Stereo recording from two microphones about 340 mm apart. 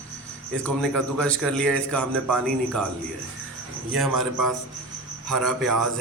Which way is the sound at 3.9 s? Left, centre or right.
Centre.